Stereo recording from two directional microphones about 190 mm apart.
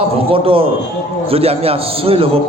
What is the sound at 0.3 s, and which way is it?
A man's voice, 30° right (ahead or behind).